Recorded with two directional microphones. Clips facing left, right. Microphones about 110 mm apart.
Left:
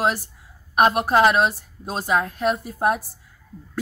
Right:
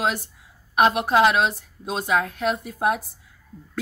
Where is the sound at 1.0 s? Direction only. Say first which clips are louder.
Left 1 dB; centre (ahead or behind).